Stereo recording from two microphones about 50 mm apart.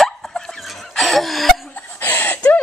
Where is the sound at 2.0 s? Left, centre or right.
Left.